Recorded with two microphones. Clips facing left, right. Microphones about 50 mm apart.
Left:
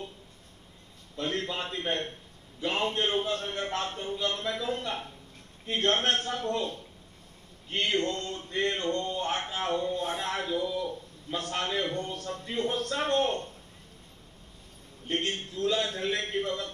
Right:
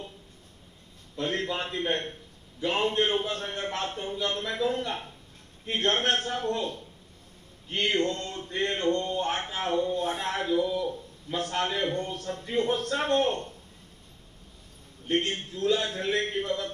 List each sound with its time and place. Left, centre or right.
1.1 s a man's voice: right
15.0 s a man's voice: right